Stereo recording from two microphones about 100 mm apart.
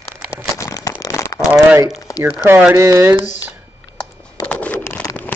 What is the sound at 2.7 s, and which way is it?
Speech, 30° right (ahead or behind).